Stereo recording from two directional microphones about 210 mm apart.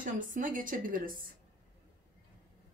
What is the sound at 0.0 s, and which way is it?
A woman's voice, 40° right (ahead or behind).